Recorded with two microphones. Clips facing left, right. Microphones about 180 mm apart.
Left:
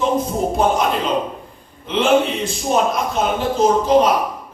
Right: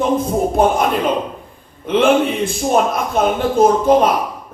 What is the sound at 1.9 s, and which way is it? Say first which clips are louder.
Speech: right 2 dB; 55° right (ahead or behind).